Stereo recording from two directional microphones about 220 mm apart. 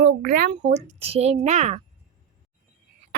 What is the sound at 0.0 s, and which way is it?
A child's voice, 40° right (ahead or behind).